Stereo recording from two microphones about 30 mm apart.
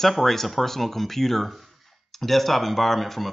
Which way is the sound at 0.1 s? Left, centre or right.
Centre.